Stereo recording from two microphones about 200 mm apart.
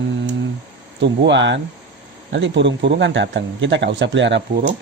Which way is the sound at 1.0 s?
60° right (ahead or behind).